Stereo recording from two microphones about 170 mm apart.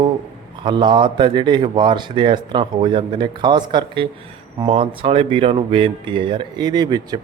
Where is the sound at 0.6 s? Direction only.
25° right (ahead or behind).